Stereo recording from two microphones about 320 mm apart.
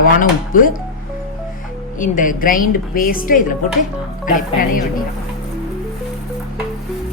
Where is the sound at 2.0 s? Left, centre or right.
Left.